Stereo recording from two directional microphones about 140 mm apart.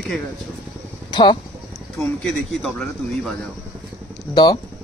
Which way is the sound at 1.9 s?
5° left (ahead or behind).